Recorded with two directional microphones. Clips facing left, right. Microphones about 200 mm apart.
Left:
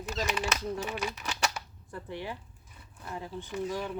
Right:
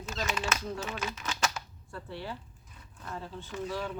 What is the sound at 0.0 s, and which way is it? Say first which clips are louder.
Speech: left 2 dB; 15° left (ahead or behind).